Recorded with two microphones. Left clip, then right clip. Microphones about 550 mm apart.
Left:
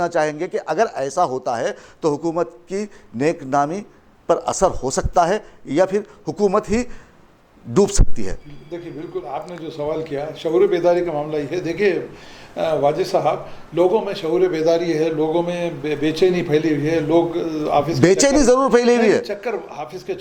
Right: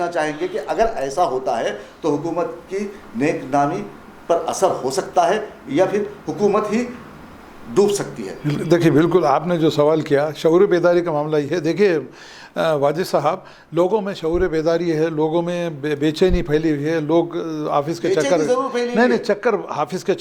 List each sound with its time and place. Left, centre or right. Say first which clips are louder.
0.0 s speech: left 1 dB; left
7.7 s speech: right 1 dB; left
8.4 s a man's voice: right 17 dB; right
18.0 s speech: left 5 dB; left
18.9 s a man's voice: even; right